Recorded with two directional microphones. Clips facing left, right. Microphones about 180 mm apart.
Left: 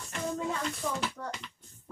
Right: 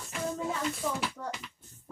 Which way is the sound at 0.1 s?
5° right (ahead or behind).